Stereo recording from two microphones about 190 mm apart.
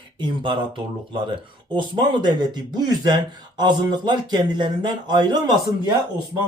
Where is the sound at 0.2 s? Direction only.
25° right (ahead or behind).